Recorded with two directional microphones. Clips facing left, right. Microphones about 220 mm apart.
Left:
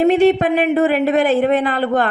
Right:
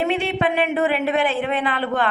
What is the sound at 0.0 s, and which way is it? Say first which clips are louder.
A man's voice: left 9 dB; 40° left (ahead or behind).